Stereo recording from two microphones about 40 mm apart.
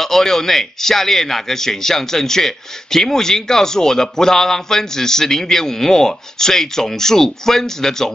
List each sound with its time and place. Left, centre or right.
0.0 s a man's voice: centre